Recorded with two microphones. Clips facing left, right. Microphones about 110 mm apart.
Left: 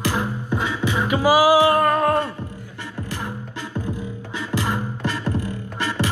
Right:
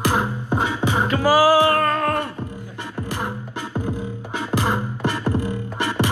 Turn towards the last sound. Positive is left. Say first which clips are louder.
# right 2 dB
turn(degrees=-20)  # may be behind; listen again after turning